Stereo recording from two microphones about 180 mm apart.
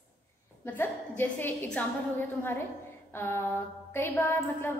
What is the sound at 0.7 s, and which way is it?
A woman's voice, 10° left (ahead or behind).